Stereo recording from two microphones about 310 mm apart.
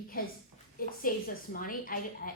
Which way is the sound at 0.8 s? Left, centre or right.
Left.